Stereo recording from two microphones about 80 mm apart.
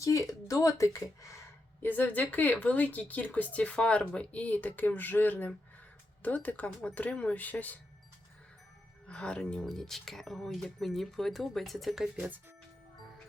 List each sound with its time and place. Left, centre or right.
0.0 s speech: left
1.8 s speech: left
9.0 s speech: centre